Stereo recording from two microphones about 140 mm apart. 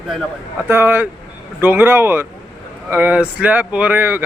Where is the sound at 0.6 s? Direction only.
15° right (ahead or behind).